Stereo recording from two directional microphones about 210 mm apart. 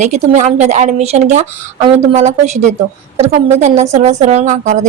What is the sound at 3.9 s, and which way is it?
Speech, 35° right (ahead or behind).